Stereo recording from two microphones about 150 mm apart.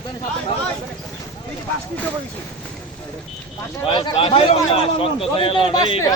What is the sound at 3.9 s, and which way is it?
A man's voice, 35° left (ahead or behind).